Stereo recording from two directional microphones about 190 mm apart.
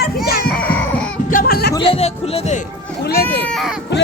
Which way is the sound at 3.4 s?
5° left (ahead or behind).